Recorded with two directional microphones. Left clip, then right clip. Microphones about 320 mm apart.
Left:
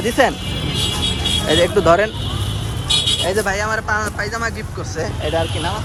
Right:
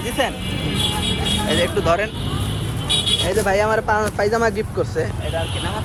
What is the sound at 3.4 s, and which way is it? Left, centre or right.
Speech, centre.